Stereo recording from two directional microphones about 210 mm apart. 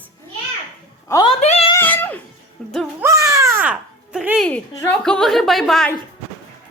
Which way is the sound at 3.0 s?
15° right (ahead or behind).